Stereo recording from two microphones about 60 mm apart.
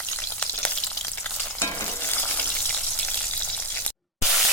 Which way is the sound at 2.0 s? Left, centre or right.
Left.